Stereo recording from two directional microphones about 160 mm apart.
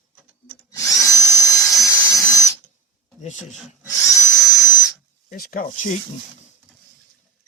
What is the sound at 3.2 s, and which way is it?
Speech, 50° left (ahead or behind).